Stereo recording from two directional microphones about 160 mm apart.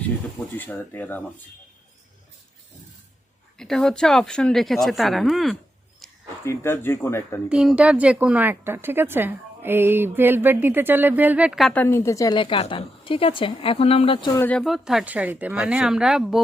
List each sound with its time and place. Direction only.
0.6 s speech: 10° left (ahead or behind)
3.6 s a woman's voice: centre (ahead or behind)
6.0 s a sound: centre (ahead or behind)
6.4 s speech: 15° left (ahead or behind)
7.5 s speech: 5° right (ahead or behind)
11.7 s a woman's voice: 10° left (ahead or behind); by 14.3 s 35° left (ahead or behind)
14.3 s speech: 10° left (ahead or behind)
14.6 s a woman's voice: centre (ahead or behind)